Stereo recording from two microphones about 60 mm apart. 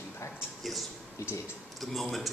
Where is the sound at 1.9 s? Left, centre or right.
Centre.